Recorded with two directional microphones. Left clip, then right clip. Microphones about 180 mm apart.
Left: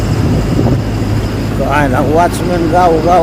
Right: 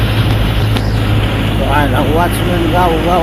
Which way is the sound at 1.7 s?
15° left (ahead or behind).